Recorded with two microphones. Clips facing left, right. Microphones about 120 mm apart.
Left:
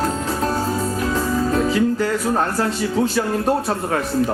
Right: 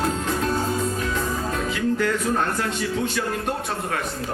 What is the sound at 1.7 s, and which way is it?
Music, 35° left (ahead or behind).